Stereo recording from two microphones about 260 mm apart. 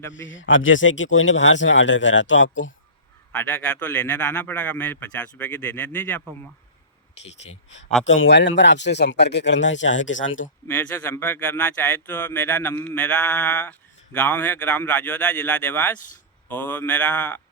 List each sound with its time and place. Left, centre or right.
0.1 s speech: left
3.3 s a man's voice: centre
7.4 s speech: left
8.0 s speech: left
10.7 s speech: centre